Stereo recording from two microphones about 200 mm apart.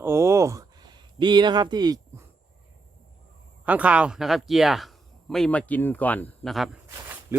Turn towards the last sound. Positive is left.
turn(degrees=0)  # may be behind; listen again after turning